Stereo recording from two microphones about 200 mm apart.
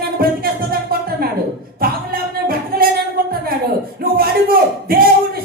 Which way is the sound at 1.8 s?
45° right (ahead or behind).